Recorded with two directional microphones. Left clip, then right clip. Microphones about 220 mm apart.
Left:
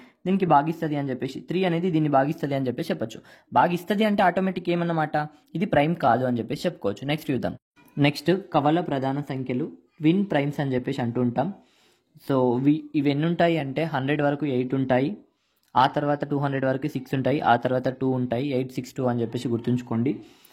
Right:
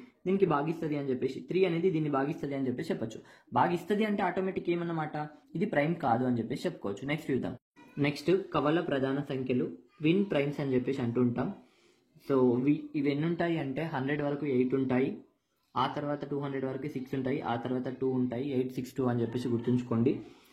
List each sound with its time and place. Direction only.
0.2 s speech: 50° left (ahead or behind)